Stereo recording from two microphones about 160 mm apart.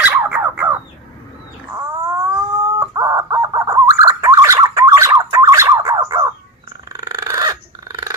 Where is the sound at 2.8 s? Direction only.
20° right (ahead or behind).